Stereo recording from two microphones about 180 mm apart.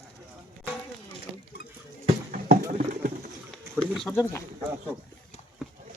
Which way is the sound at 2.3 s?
45° right (ahead or behind).